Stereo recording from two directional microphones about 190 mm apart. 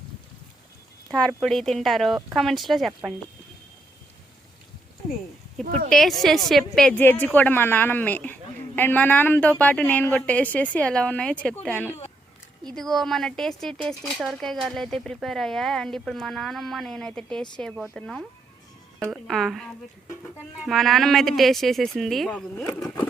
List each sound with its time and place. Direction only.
1.0 s speech: 5° left (ahead or behind)
5.6 s speech: 50° right (ahead or behind)
5.9 s a woman's voice: centre (ahead or behind)
19.3 s speech: centre (ahead or behind)
20.7 s speech: centre (ahead or behind)